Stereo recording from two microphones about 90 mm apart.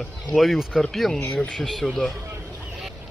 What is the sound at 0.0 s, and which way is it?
Speech, 5° left (ahead or behind).